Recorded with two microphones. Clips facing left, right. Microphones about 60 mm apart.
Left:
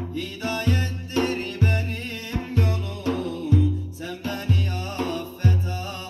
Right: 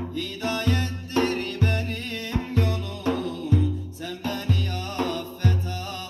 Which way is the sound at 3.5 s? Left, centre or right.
Centre.